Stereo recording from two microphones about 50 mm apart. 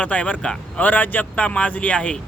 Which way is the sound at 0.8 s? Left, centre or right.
Left.